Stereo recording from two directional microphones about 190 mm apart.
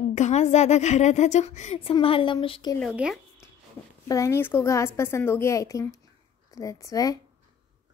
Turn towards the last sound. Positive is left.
turn(degrees=15)  # may be behind; listen again after turning